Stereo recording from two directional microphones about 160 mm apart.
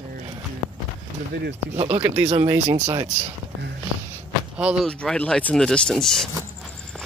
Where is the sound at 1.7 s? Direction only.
40° right (ahead or behind).